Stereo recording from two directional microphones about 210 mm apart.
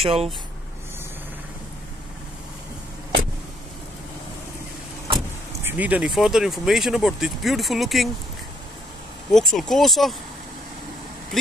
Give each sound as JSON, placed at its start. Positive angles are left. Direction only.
{"t": 0.0, "sound": "speech", "side_deg": -30}
{"t": 5.6, "sound": "speech", "side_deg": -10}
{"t": 9.3, "sound": "speech", "side_deg": 0}